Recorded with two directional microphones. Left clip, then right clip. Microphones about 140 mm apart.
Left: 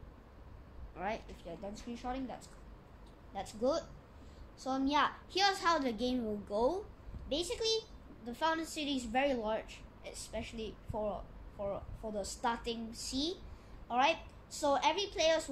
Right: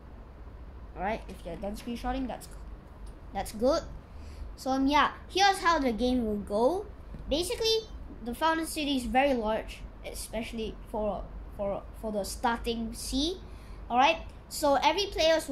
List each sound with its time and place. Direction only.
0.9 s speech: 5° left (ahead or behind)
1.5 s a woman's voice: 15° right (ahead or behind)
3.3 s a woman's voice: 20° right (ahead or behind)
4.6 s a woman's voice: 10° right (ahead or behind)